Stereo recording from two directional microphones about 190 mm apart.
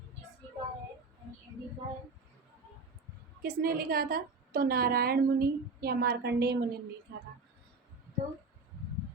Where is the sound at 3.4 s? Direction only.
50° right (ahead or behind).